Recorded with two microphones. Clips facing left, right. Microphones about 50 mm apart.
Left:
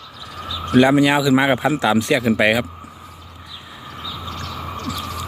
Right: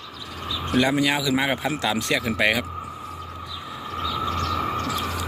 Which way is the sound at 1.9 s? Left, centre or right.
Centre.